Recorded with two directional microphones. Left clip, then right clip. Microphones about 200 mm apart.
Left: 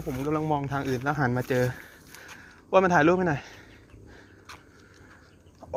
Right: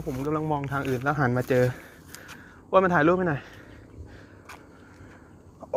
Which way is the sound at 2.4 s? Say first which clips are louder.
Right 1 dB; 10° left (ahead or behind).